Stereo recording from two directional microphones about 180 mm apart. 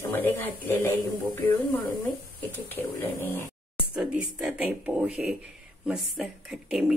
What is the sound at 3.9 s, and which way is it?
A woman's voice, 5° right (ahead or behind).